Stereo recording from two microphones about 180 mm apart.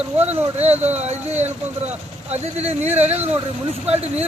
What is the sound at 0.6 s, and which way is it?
Speech, 35° right (ahead or behind).